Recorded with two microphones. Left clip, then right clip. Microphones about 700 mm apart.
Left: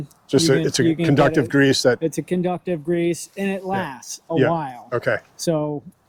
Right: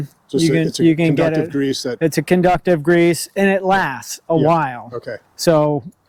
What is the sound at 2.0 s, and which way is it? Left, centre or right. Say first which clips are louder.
Speech: right 7 dB; right.